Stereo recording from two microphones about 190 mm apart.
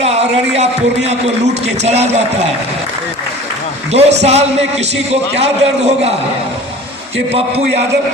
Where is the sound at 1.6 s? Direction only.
35° right (ahead or behind).